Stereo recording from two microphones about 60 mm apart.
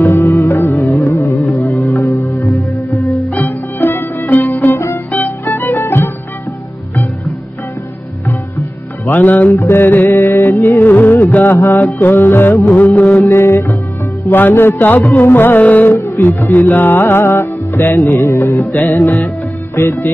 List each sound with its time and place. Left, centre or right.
0.0 s music: left
1.1 s carnatic music: left
1.9 s music: left
2.5 s music: centre
3.3 s music: left
4.7 s music: left
9.1 s music: left
9.6 s music: left
12.6 s music: left
13.3 s music: left
14.3 s music: left
16.0 s music: left